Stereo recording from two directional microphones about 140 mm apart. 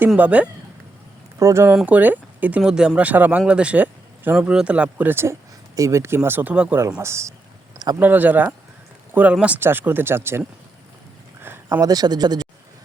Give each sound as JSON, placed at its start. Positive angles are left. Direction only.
{"t": 0.2, "sound": "speech", "side_deg": -10}
{"t": 1.4, "sound": "speech", "side_deg": -20}
{"t": 1.7, "sound": "speech", "side_deg": -10}
{"t": 11.4, "sound": "a sound", "side_deg": -15}
{"t": 11.9, "sound": "speech", "side_deg": -30}